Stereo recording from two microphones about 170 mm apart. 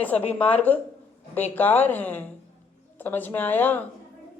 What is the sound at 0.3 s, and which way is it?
Speech, 10° left (ahead or behind).